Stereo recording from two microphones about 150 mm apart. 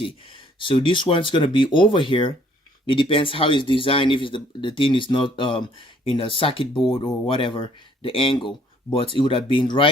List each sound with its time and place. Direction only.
0.0 s speech: 35° left (ahead or behind)